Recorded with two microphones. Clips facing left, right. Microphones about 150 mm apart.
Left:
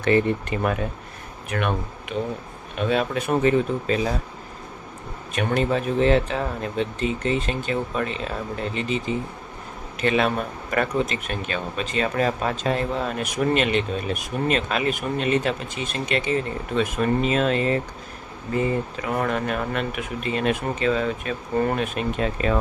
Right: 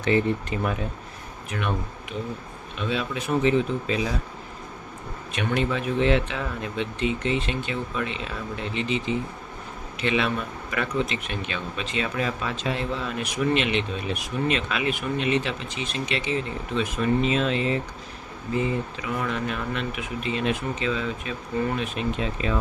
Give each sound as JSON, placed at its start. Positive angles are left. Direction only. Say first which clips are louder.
{"t": 0.0, "sound": "speech", "louder": "left 3 dB", "side_deg": 55}
{"t": 5.3, "sound": "speech", "louder": "left 3 dB", "side_deg": 40}